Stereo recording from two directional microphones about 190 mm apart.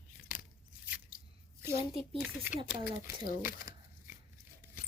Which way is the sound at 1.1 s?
45° left (ahead or behind).